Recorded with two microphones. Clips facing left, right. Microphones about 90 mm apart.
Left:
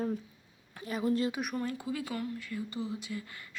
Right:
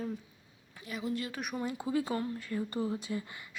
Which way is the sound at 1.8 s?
30° right (ahead or behind).